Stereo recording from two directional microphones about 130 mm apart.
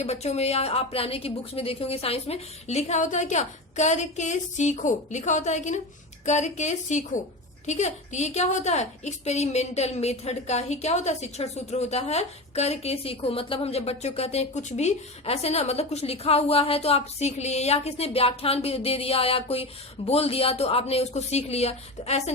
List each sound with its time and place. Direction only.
0.0 s a woman's voice: 55° left (ahead or behind)